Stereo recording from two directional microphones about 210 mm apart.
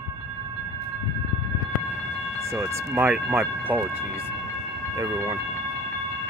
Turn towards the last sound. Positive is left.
turn(degrees=-15)  # may be behind; listen again after turning